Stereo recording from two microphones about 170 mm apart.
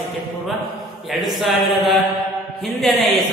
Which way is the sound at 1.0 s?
Centre (ahead or behind).